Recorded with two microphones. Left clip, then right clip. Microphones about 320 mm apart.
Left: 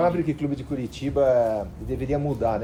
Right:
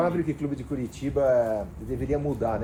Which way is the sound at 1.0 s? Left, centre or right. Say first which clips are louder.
Left 2 dB; left.